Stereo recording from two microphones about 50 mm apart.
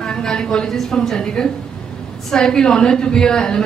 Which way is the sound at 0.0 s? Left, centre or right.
Centre.